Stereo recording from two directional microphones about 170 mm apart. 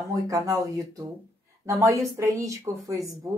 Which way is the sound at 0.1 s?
20° right (ahead or behind).